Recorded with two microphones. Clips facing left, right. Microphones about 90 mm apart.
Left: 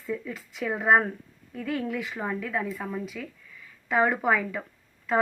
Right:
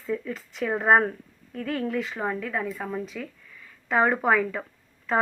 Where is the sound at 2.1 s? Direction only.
15° right (ahead or behind).